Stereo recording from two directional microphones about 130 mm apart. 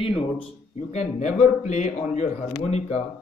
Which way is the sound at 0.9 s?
60° left (ahead or behind).